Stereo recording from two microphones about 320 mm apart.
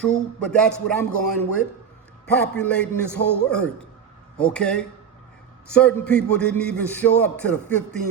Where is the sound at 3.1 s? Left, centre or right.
Left.